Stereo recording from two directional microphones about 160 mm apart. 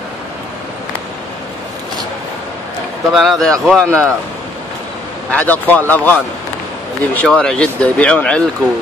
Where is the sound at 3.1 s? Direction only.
Centre (ahead or behind).